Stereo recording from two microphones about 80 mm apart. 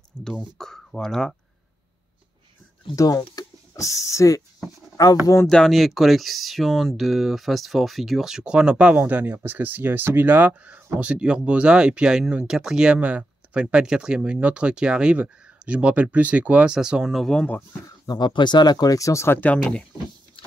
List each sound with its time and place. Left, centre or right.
0.2 s speech: centre
3.0 s speech: left
5.5 s speech: centre
18.0 s speech: left
19.4 s speech: centre